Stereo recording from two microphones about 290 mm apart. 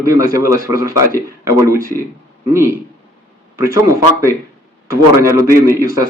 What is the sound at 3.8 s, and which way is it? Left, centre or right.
A man's voice, centre.